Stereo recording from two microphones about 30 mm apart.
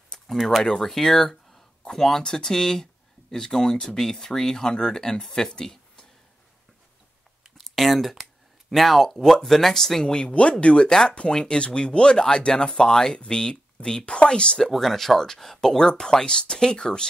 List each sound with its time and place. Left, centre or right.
0.3 s speech: centre; by 6.0 s left
7.6 s speech: centre
9.2 s speech: centre
10.0 s speech: left
10.9 s speech: left
14.7 s speech: centre; by 17.1 s left